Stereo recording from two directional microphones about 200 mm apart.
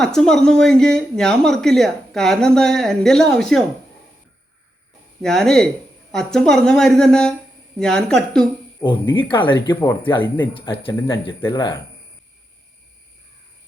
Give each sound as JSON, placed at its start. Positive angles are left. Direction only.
{"t": 0.0, "sound": "speech", "side_deg": 5}
{"t": 5.2, "sound": "speech", "side_deg": 5}
{"t": 9.3, "sound": "speech", "side_deg": 25}
{"t": 10.2, "sound": "speech", "side_deg": 10}
{"t": 10.5, "sound": "speech", "side_deg": 25}